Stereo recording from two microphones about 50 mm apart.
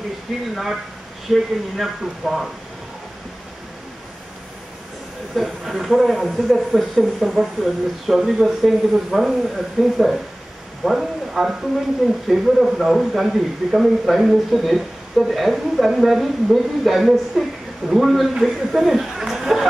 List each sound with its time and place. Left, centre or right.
1.3 s speech: centre
5.3 s speech: centre